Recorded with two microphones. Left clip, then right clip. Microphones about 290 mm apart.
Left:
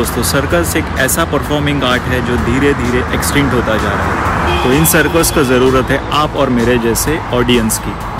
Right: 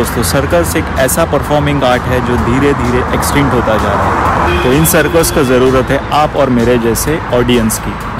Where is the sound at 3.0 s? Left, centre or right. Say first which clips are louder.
Right 2 dB; centre.